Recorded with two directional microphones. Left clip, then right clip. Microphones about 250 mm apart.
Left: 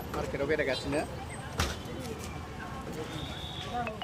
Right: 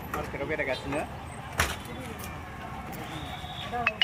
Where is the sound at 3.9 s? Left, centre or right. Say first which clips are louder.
Right 10 dB; right.